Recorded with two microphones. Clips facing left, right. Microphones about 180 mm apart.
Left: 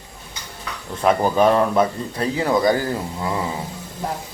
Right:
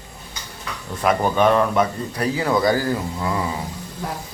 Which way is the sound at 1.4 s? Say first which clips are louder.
Even; 30° left (ahead or behind).